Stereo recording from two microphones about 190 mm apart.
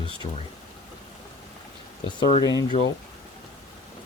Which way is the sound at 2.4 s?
20° left (ahead or behind).